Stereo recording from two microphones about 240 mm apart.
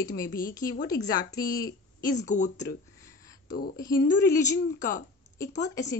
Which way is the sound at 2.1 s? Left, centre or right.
Left.